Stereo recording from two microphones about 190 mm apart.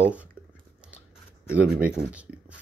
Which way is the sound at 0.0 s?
5° right (ahead or behind).